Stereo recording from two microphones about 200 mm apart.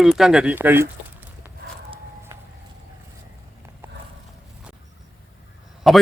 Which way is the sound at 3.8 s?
10° right (ahead or behind).